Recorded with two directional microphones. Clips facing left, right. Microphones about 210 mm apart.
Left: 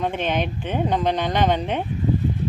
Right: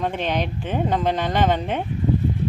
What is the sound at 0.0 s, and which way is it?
Speech, centre (ahead or behind).